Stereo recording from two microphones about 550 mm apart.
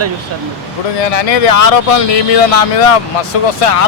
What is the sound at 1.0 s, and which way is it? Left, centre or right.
Speech, left.